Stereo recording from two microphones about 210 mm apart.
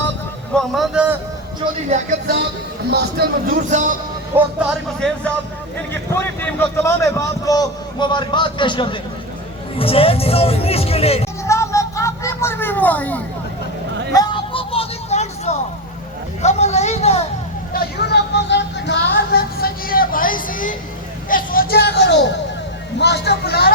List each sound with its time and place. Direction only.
0.5 s a man's voice: centre (ahead or behind)
1.6 s speech: 25° right (ahead or behind)
2.9 s speech: 45° right (ahead or behind)
4.3 s speech: 10° right (ahead or behind)
4.9 s a man's voice: 5° left (ahead or behind); by 11.3 s 30° left (ahead or behind)
11.4 s a sound: 15° left (ahead or behind)
14.2 s vehicle: 25° left (ahead or behind)
16.4 s speech: 35° left (ahead or behind)
17.7 s speech: 50° left (ahead or behind)